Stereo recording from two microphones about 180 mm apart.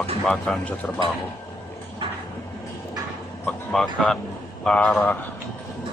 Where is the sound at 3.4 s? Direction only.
5° left (ahead or behind).